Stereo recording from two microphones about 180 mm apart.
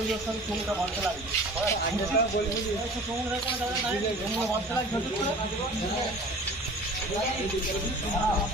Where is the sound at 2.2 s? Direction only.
60° left (ahead or behind).